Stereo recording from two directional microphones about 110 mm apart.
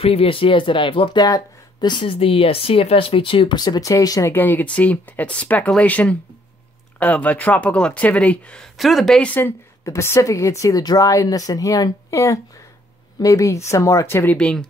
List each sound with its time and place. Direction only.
0.0 s speech: 60° left (ahead or behind)
1.2 s speech: 40° left (ahead or behind)
2.1 s speech: 60° left (ahead or behind); by 4.3 s 30° left (ahead or behind)
4.3 s speech: 15° left (ahead or behind)
9.8 s speech: 25° left (ahead or behind)
14.3 s speech: 10° left (ahead or behind)